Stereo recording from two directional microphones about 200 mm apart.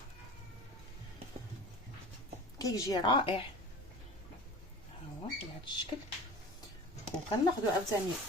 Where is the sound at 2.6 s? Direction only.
20° left (ahead or behind).